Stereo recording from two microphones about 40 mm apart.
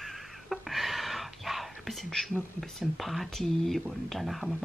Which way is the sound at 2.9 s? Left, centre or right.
Centre.